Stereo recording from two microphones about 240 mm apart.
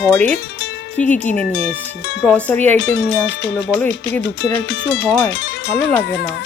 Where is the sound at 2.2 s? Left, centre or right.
Centre.